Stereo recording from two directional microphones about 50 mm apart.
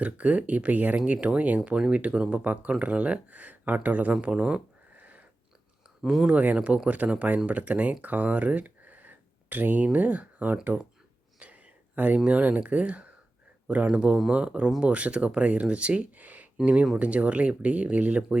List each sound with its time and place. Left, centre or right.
0.0 s speech: right
6.0 s speech: centre
6.2 s speech: right